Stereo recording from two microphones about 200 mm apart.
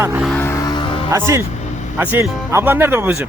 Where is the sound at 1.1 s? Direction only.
15° right (ahead or behind).